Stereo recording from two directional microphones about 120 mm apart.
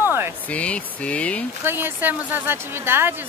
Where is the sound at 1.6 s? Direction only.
15° right (ahead or behind).